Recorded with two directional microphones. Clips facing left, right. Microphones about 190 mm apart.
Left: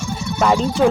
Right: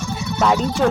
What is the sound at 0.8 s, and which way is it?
Speech, 5° left (ahead or behind).